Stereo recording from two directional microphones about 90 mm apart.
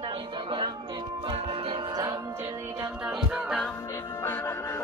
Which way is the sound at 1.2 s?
85° right.